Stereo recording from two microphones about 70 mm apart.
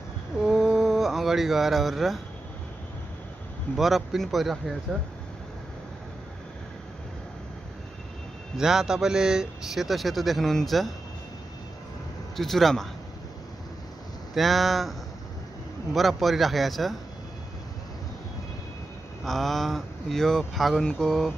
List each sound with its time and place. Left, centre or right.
0.4 s a sound: centre
3.7 s speech: centre
8.5 s speech: centre
12.4 s speech: centre
14.3 s speech: centre
19.2 s speech: centre